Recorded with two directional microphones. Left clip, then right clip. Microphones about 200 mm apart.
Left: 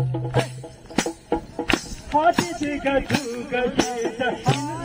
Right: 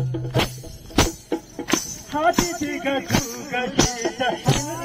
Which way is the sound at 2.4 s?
45° right (ahead or behind).